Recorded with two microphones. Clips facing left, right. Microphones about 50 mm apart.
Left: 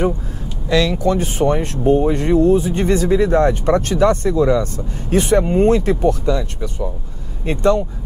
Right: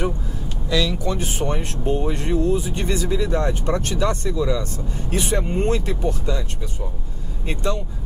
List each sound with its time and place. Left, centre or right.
0.7 s speech: left
5.4 s speech: centre
5.7 s speech: left